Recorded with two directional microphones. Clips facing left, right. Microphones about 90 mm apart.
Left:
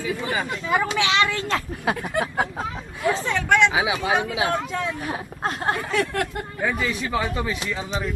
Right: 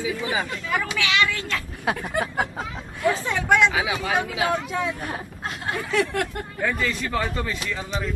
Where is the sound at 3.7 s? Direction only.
20° left (ahead or behind).